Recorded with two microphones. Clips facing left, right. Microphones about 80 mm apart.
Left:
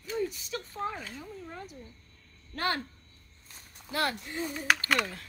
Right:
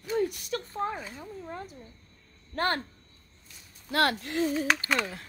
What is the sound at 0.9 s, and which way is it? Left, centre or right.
Speech, centre.